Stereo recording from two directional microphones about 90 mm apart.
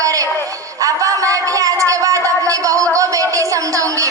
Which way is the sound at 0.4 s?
40° right (ahead or behind).